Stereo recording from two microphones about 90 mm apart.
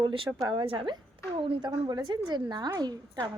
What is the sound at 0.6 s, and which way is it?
Speech, 80° right.